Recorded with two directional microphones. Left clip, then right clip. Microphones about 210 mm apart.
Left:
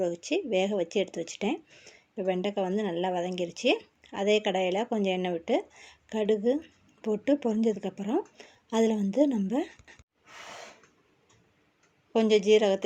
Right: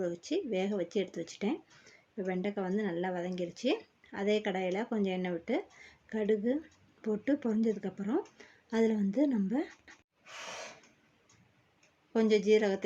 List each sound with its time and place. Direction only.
0.0 s speech: centre (ahead or behind)
12.1 s speech: centre (ahead or behind)